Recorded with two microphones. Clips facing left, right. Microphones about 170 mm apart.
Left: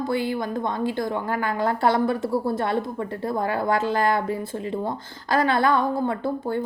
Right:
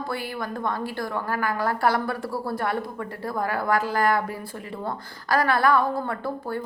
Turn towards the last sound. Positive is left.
turn(degrees=20)  # may be behind; listen again after turning